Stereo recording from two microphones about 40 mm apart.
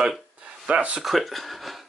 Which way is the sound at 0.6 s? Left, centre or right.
Right.